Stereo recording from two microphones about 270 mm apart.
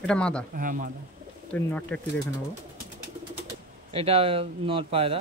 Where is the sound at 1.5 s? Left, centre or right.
Centre.